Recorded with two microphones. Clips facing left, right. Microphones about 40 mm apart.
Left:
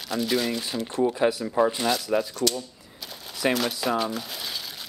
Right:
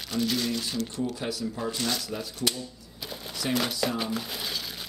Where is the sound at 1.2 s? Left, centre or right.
Left.